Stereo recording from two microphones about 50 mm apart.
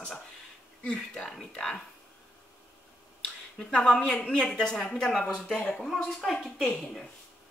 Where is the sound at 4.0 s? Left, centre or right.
Centre.